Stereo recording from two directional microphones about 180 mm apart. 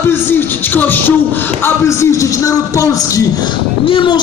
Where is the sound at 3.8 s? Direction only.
30° left (ahead or behind).